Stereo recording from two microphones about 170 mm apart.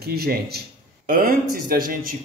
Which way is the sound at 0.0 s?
70° right (ahead or behind).